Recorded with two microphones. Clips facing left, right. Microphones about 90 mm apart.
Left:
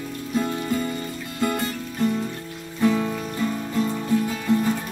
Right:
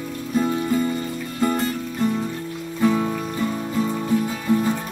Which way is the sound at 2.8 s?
10° right (ahead or behind).